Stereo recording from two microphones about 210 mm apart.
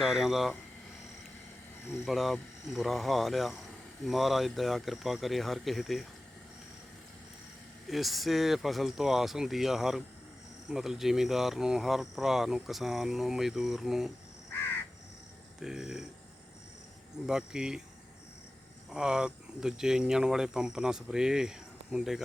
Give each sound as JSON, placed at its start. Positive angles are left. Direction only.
{"t": 0.0, "sound": "speech", "side_deg": 0}
{"t": 2.0, "sound": "speech", "side_deg": 0}
{"t": 7.9, "sound": "speech", "side_deg": 0}
{"t": 15.6, "sound": "speech", "side_deg": 0}
{"t": 17.2, "sound": "speech", "side_deg": -5}
{"t": 18.9, "sound": "speech", "side_deg": -5}